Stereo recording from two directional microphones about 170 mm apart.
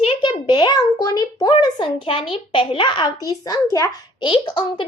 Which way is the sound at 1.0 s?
20° left (ahead or behind).